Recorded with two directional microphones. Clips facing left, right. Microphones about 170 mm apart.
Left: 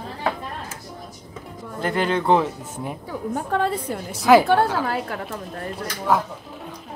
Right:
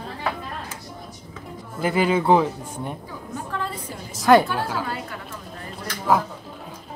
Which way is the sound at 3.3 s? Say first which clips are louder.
Left 7 dB; 65° left (ahead or behind).